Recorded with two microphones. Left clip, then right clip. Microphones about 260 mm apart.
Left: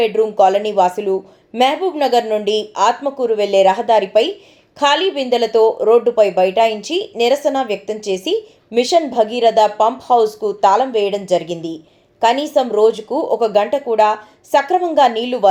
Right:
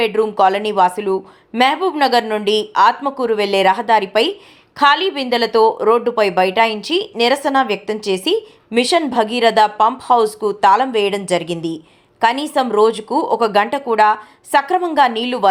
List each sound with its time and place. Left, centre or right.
0.2 s a woman's voice: right